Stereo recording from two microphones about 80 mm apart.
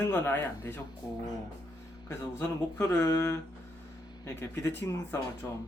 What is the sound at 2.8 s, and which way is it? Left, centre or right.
Speech, left.